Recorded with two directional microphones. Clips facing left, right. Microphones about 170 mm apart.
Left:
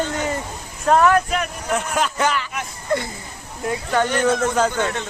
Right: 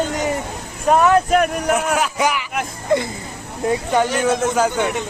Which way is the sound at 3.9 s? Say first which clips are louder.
Left 1 dB; 10° right (ahead or behind).